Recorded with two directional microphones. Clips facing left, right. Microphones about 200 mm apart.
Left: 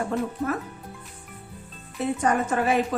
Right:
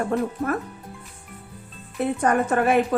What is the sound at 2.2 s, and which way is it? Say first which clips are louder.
Speech: right 3 dB; 55° right (ahead or behind).